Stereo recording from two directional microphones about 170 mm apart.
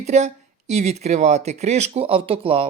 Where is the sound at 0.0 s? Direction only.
40° right (ahead or behind).